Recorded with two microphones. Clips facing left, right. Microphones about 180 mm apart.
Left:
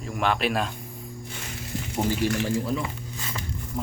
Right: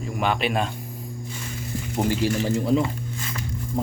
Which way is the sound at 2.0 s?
20° right (ahead or behind).